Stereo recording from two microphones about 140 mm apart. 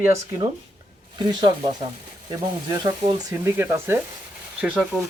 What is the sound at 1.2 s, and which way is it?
Speech, 30° right (ahead or behind).